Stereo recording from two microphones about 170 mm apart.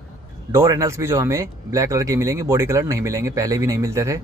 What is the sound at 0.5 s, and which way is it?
Speech, 20° right (ahead or behind).